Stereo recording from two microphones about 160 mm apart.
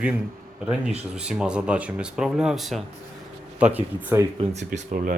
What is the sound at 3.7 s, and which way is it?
Speech, 15° right (ahead or behind).